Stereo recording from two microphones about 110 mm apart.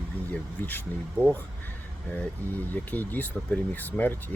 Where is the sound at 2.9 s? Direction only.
15° left (ahead or behind).